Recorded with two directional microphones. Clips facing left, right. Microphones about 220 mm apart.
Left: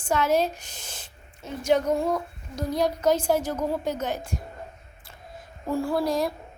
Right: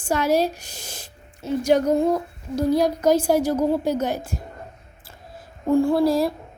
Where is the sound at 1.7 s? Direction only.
35° right (ahead or behind).